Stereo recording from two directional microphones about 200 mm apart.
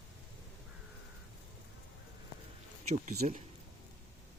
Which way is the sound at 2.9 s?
35° right (ahead or behind).